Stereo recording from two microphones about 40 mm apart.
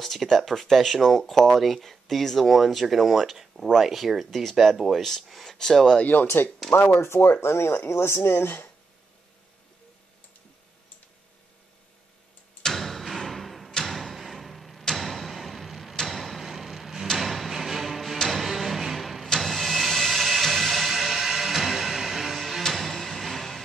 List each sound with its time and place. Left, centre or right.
0.0 s speech: centre
5.6 s speech: centre
6.2 s speech: left
7.0 s speech: left
12.6 s a sound: centre
17.2 s music: centre
18.2 s a sound: centre
19.2 s vehicle: centre
20.9 s music: centre
22.6 s music: centre